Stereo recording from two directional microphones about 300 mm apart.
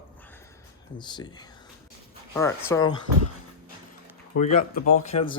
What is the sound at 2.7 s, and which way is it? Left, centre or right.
Speech, centre.